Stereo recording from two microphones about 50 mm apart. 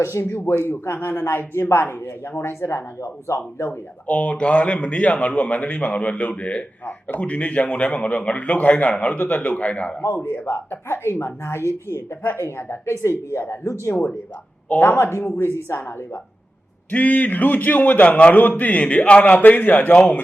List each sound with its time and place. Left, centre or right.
0.0 s speech: left
0.6 s speech: left
3.7 s speech: left
10.2 s speech: left
14.7 s a man's voice: left
15.2 s speech: left
16.9 s a man's voice: left